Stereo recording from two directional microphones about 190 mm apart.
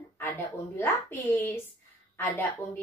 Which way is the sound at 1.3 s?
10° left (ahead or behind).